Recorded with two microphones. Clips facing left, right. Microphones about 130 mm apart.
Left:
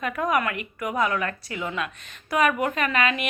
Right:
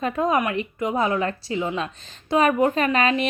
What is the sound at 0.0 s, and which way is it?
A woman's voice, 25° right (ahead or behind).